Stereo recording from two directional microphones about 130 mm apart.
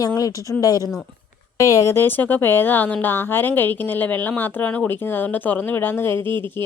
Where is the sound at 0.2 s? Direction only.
25° left (ahead or behind).